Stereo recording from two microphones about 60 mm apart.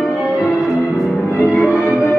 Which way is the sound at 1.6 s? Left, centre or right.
Left.